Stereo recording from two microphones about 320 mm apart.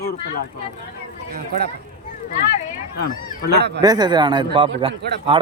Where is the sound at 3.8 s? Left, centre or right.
Centre.